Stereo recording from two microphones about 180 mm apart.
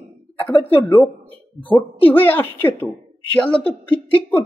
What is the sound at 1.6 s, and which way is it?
Speech, 10° left (ahead or behind).